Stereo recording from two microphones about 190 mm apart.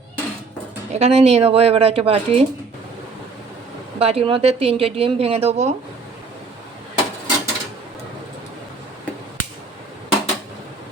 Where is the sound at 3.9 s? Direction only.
30° right (ahead or behind).